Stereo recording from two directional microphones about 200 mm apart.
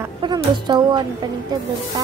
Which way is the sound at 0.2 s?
20° right (ahead or behind).